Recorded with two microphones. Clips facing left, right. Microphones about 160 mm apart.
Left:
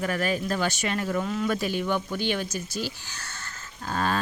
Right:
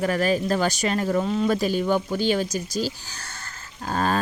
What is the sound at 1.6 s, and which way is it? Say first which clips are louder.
Speech: right 5 dB; 40° right (ahead or behind).